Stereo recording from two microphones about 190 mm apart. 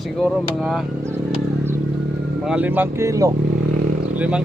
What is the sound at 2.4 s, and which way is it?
Speech, 5° right (ahead or behind).